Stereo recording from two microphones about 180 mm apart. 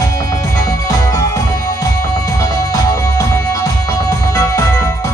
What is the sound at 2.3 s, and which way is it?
Music, 20° left (ahead or behind).